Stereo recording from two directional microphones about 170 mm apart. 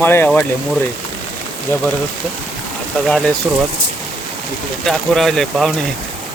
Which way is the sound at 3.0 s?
5° left (ahead or behind).